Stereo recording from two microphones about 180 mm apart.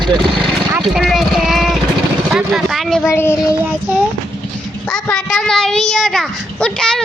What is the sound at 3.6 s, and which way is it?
Child singing, 10° right (ahead or behind).